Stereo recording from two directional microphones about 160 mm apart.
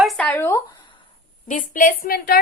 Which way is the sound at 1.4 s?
55° left (ahead or behind).